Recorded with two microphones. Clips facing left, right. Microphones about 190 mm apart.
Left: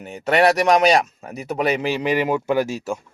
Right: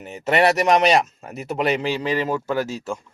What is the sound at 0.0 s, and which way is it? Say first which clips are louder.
A man's voice: left 1 dB; centre (ahead or behind).